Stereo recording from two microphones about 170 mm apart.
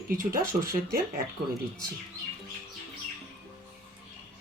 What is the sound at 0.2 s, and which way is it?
Speech, 55° right (ahead or behind).